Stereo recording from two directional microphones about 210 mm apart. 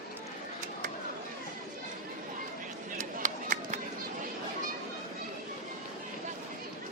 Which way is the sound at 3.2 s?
35° right (ahead or behind).